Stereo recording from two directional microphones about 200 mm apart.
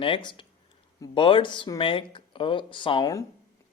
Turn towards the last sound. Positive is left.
turn(degrees=20)  # may be behind; listen again after turning